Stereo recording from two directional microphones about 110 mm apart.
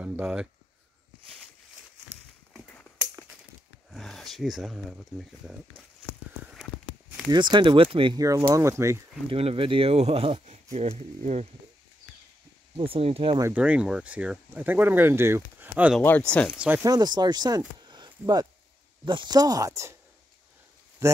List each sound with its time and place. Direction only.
0.0 s a sound: 10° right (ahead or behind)
3.9 s speech: centre (ahead or behind)
6.5 s walk: centre (ahead or behind)
7.2 s speech: 45° right (ahead or behind)
8.2 s speech: 30° right (ahead or behind)
9.3 s speech: 60° right (ahead or behind); by 11.4 s 80° right
12.7 s speech: 60° right (ahead or behind)
13.5 s speech: 15° right (ahead or behind)
16.0 s speech: 15° left (ahead or behind)
16.5 s speech: 10° right (ahead or behind)
16.8 s speech: 40° right (ahead or behind)
21.0 s speech: 30° right (ahead or behind)